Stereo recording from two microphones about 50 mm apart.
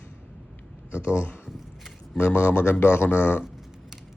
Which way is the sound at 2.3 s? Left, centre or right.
Left.